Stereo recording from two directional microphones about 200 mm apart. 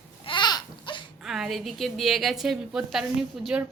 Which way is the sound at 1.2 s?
Centre (ahead or behind).